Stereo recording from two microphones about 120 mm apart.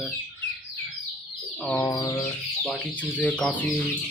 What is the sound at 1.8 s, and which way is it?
Bird, 30° left (ahead or behind).